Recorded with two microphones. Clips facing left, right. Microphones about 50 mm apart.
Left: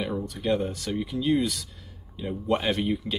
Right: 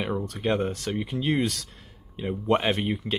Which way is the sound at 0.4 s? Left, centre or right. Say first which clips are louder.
Even; right.